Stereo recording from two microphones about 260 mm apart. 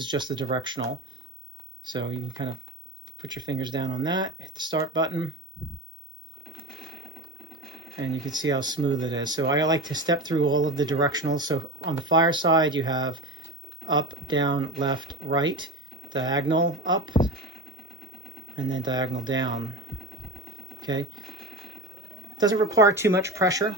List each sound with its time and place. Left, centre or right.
0.0 s speech: centre
1.8 s speech: centre
3.2 s speech: centre
8.1 s speech: centre
18.5 s speech: centre
20.8 s speech: centre
22.4 s speech: centre